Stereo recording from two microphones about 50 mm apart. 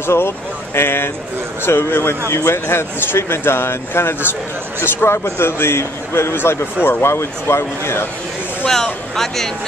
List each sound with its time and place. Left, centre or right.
0.0 s speech: left
8.6 s speech: centre